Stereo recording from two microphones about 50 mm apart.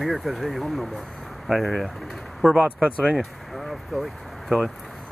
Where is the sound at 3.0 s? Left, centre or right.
Centre.